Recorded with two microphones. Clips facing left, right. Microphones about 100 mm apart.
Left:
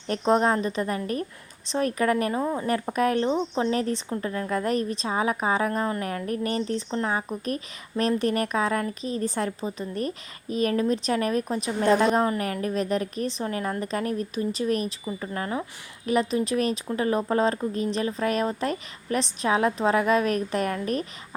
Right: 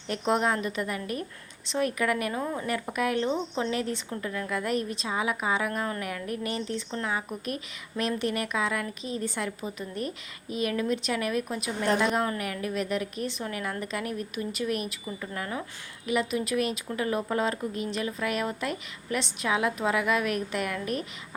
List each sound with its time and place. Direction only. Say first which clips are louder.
0.1 s speech: left 4 dB; 35° left (ahead or behind)
2.4 s a woman's voice: left 5 dB; 20° left (ahead or behind)
2.6 s speech: left 5 dB; 35° left (ahead or behind)